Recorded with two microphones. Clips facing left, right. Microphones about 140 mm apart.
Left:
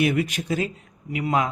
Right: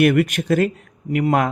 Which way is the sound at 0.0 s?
60° right (ahead or behind).